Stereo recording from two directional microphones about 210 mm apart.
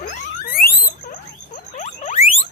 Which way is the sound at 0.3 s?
45° left (ahead or behind).